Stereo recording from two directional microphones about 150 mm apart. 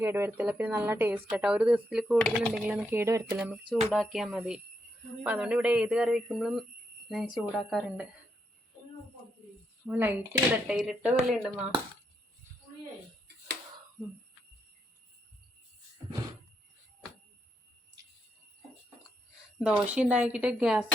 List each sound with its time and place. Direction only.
0.0 s speech: 15° right (ahead or behind); by 2.5 s 5° left (ahead or behind)
2.6 s speech: 10° right (ahead or behind)
3.9 s speech: centre (ahead or behind)
9.8 s speech: 10° right (ahead or behind)
19.5 s speech: 10° right (ahead or behind)